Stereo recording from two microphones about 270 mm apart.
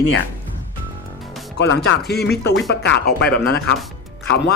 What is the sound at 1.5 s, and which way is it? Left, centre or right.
Speech, left.